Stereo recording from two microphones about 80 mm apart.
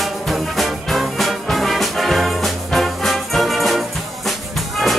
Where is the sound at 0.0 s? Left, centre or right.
Centre.